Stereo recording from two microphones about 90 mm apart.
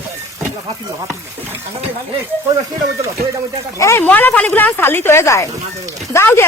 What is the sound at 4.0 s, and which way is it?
Speech, 20° left (ahead or behind).